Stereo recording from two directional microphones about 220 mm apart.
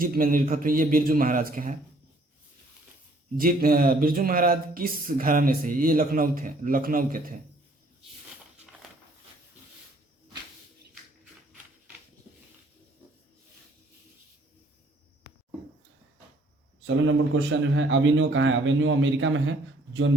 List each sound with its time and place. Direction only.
0.0 s speech: 40° right (ahead or behind)
3.3 s speech: 40° right (ahead or behind)
15.3 s a sound: 45° left (ahead or behind)
16.8 s a man's voice: 55° right (ahead or behind)